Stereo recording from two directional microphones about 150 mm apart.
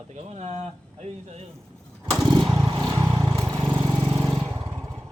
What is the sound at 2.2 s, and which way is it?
Motorcycle, 30° right (ahead or behind).